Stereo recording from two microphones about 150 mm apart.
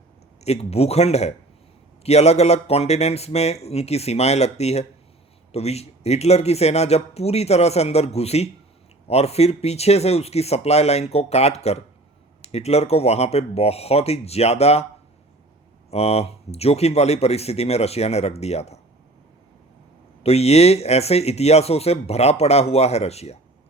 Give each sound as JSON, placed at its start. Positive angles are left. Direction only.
{"t": 0.4, "sound": "speech", "side_deg": 45}
{"t": 15.9, "sound": "speech", "side_deg": 45}
{"t": 20.2, "sound": "speech", "side_deg": 45}